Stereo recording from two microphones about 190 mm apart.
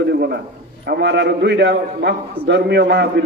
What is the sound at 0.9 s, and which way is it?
A man's voice, 60° right (ahead or behind).